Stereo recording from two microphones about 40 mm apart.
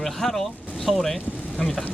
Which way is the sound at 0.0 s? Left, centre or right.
Centre.